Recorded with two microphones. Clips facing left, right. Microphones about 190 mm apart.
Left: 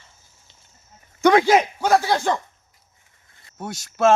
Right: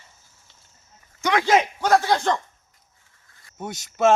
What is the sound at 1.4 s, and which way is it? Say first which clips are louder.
Speech: left 2 dB; 10° left (ahead or behind).